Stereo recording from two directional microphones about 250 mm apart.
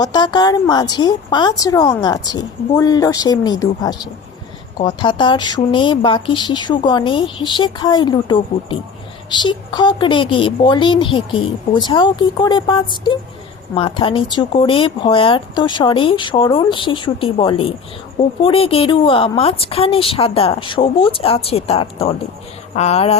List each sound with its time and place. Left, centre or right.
0.0 s speech: centre